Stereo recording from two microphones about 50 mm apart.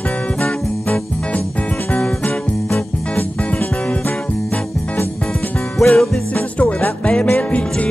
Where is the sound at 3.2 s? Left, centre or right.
Left.